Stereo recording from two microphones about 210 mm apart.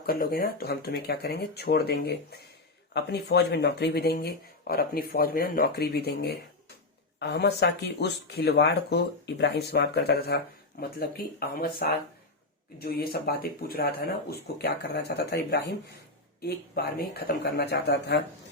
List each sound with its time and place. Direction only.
0.0 s speech: 45° left (ahead or behind)